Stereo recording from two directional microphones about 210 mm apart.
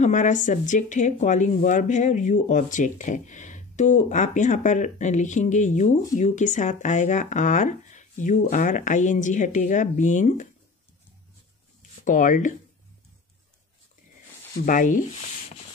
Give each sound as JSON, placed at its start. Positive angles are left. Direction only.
{"t": 0.0, "sound": "speech", "side_deg": 35}
{"t": 12.0, "sound": "speech", "side_deg": 40}
{"t": 14.7, "sound": "speech", "side_deg": 40}